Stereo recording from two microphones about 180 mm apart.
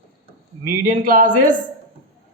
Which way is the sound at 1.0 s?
50° right (ahead or behind).